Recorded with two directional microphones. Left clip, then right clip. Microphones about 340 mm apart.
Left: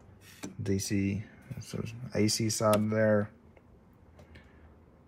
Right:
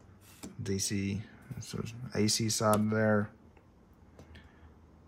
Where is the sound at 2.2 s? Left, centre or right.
Right.